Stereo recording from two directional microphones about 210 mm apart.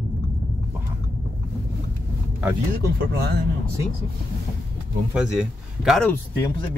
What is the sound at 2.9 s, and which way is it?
Speech, 50° right (ahead or behind).